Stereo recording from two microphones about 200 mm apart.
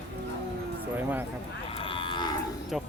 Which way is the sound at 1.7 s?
25° left (ahead or behind).